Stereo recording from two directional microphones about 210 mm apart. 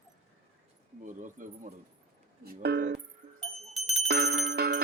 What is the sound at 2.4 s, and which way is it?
Speech, 50° right (ahead or behind).